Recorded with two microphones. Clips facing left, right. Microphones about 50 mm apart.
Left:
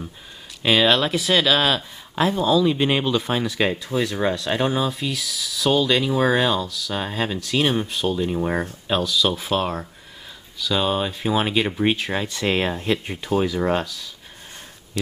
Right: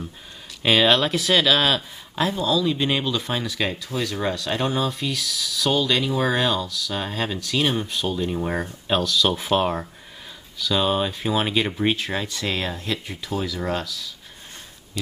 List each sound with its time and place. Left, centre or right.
0.6 s speech: centre
2.2 s speech: centre
9.3 s speech: centre; by 14.1 s left